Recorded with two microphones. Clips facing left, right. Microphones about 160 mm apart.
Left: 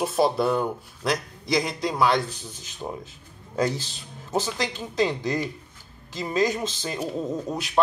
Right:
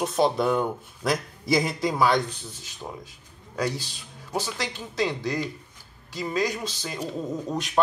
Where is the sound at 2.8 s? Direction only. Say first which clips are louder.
Left 4 dB; 20° left (ahead or behind).